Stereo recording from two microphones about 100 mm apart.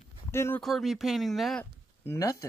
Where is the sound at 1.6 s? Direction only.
30° left (ahead or behind).